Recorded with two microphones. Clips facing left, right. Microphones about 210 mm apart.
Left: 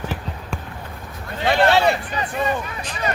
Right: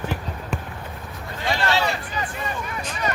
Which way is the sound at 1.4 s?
60° left (ahead or behind).